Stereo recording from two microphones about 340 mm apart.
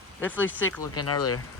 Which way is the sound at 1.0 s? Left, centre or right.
Left.